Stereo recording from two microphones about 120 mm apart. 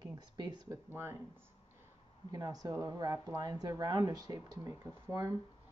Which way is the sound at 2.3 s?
30° right (ahead or behind).